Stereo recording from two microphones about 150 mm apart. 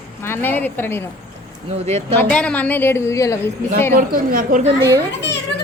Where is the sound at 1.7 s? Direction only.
45° right (ahead or behind).